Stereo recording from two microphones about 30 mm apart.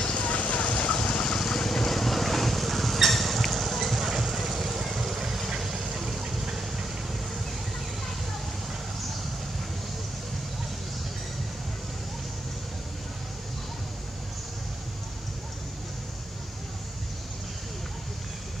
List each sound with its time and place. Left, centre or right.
0.0 s vehicle: left
1.4 s vehicle: centre